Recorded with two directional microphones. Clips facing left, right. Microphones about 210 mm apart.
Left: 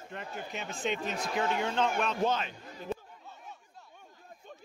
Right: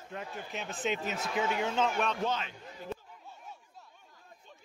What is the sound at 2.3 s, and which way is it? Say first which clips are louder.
Speech: left 3 dB; 45° left (ahead or behind).